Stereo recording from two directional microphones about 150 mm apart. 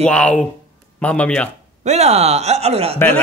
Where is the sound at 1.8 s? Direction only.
45° right (ahead or behind).